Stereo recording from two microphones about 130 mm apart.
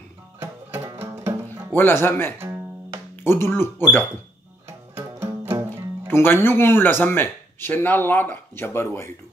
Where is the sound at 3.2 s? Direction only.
20° left (ahead or behind).